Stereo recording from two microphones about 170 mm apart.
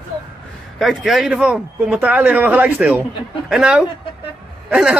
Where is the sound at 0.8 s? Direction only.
Centre (ahead or behind).